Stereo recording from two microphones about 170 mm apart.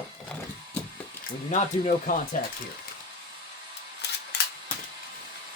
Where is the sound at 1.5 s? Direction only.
50° left (ahead or behind).